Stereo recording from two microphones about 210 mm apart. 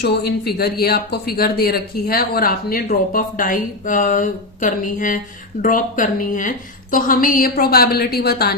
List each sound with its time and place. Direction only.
0.0 s speech: 50° left (ahead or behind)